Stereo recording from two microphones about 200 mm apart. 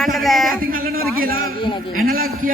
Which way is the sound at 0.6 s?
45° right (ahead or behind).